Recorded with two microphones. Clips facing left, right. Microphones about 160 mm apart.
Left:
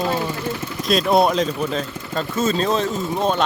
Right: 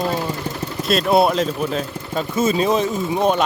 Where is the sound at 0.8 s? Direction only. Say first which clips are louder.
Right 1 dB; 5° right (ahead or behind).